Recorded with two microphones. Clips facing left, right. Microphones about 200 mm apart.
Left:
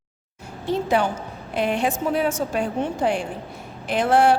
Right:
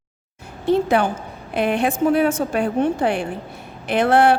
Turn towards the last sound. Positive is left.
turn(degrees=-60)  # may be behind; listen again after turning